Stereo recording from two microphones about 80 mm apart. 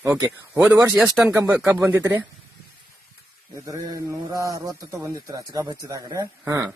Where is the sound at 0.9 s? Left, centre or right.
Centre.